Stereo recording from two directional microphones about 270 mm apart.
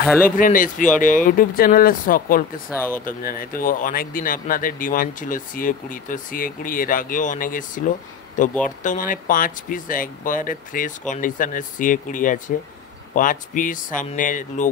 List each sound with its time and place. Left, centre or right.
0.0 s speech: centre
0.4 s speech: left